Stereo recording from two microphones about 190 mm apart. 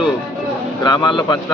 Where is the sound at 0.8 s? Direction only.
25° left (ahead or behind).